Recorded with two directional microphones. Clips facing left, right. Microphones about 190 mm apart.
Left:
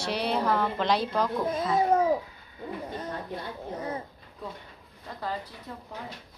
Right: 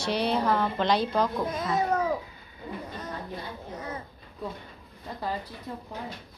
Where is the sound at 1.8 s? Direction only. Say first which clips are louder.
Left 4 dB; 25° left (ahead or behind).